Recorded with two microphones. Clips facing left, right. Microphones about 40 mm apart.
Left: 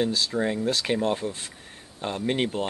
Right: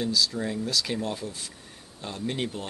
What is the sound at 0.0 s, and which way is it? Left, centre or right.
Speech, left.